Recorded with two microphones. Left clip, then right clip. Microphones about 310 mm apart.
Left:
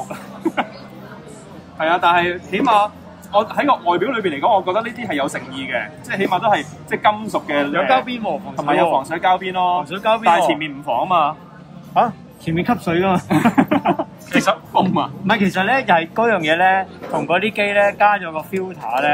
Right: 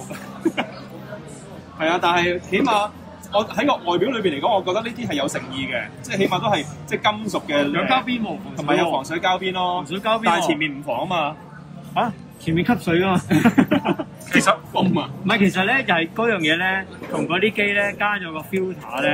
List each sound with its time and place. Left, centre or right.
1.8 s a man's voice: centre
7.9 s speech: left
9.1 s a man's voice: centre
9.8 s speech: left
10.6 s a man's voice: centre
11.9 s speech: left
13.9 s speech: centre
14.3 s a man's voice: centre
15.2 s speech: left